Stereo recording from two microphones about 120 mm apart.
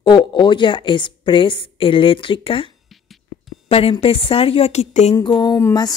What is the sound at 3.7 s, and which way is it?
Speech, 55° left (ahead or behind).